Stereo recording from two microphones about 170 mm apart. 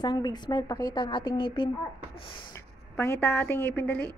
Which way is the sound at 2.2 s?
30° left (ahead or behind).